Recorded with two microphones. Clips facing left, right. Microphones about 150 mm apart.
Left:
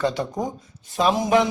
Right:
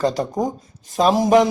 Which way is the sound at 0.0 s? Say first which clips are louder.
Right 4 dB; 40° right (ahead or behind).